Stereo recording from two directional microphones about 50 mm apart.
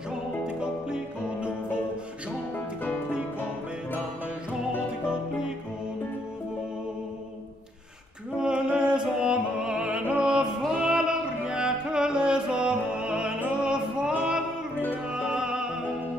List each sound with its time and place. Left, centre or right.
0.6 s music: centre
2.5 s music: left
5.0 s music: centre
8.4 s music: centre